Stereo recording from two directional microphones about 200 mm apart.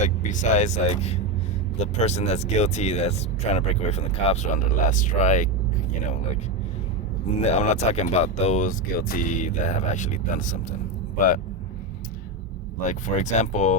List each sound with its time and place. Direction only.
0.0 s speech: 40° left (ahead or behind)
7.4 s speech: 35° left (ahead or behind)
12.8 s speech: 40° left (ahead or behind)